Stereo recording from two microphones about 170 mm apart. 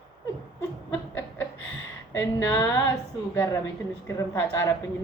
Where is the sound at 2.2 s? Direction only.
10° left (ahead or behind).